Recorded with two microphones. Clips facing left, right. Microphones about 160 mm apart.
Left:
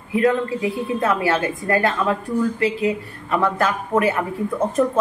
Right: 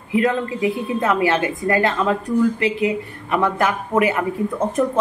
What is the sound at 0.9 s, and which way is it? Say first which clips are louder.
A woman's voice: right 1 dB; 20° right (ahead or behind).